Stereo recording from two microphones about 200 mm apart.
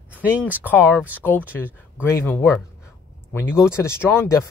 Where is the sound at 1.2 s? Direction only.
10° left (ahead or behind).